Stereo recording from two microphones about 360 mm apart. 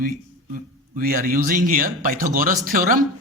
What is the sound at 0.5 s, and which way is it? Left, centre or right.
Speech, right.